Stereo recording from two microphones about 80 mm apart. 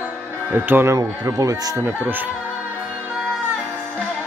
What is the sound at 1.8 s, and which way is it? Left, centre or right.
Speech, right.